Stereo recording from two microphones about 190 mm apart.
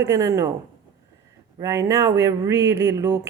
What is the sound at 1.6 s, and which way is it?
Speech, 15° right (ahead or behind).